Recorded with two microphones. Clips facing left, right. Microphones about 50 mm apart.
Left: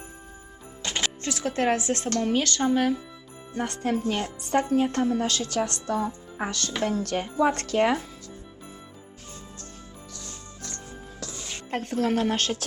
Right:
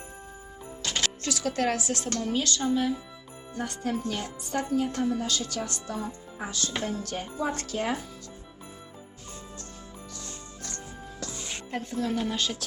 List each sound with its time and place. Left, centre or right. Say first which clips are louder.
0.8 s speech: left 1 dB; left
2.2 s speech: left 3 dB; left
11.2 s music: right 1 dB; centre
11.7 s speech: left 5 dB; left